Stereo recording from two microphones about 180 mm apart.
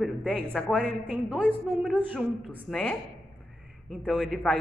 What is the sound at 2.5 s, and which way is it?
A woman's voice, 5° left (ahead or behind).